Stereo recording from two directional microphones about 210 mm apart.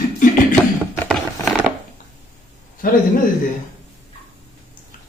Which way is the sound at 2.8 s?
40° left (ahead or behind).